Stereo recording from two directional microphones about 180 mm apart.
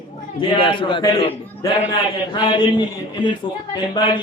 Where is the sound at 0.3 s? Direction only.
30° left (ahead or behind).